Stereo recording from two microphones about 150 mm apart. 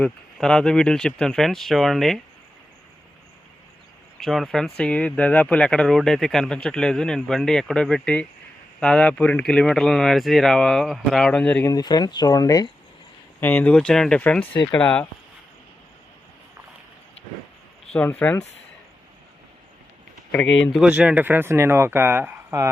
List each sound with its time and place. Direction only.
0.0 s speech: 5° left (ahead or behind)
4.2 s speech: centre (ahead or behind)
11.7 s speech: 25° left (ahead or behind)
13.4 s speech: 10° left (ahead or behind)
17.9 s speech: 10° left (ahead or behind)
20.3 s speech: 10° left (ahead or behind)
20.8 s speech: 5° right (ahead or behind)